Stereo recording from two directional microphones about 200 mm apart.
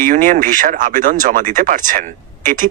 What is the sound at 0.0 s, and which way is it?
A man's voice, 40° right (ahead or behind).